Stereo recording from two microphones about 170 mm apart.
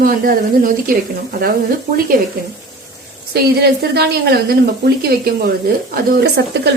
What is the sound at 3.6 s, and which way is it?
Speech, 70° right (ahead or behind).